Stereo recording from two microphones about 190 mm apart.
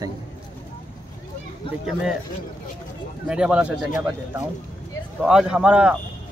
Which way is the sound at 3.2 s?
5° right (ahead or behind).